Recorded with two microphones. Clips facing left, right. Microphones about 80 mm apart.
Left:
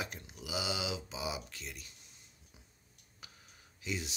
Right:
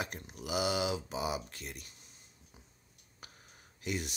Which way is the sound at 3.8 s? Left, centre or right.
Right.